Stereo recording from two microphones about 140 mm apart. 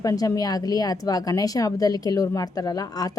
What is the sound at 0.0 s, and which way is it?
Speech, 25° left (ahead or behind).